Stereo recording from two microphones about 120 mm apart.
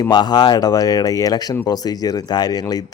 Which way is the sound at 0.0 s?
35° left (ahead or behind).